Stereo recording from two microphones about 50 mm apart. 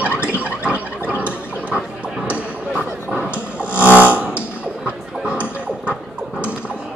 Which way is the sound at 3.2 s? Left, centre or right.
Right.